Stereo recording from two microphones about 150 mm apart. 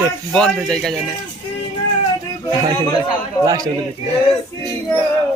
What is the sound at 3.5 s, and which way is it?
Speech, 25° right (ahead or behind).